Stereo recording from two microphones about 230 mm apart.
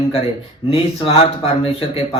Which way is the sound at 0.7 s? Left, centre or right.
Left.